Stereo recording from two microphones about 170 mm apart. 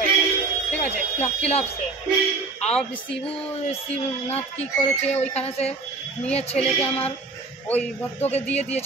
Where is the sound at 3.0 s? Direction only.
35° left (ahead or behind).